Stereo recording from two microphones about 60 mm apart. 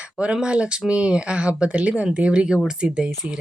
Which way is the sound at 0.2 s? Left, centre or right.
Centre.